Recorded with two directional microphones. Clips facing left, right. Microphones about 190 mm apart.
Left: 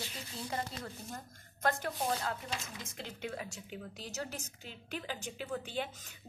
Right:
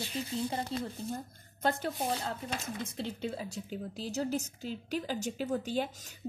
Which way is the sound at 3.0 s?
30° right (ahead or behind).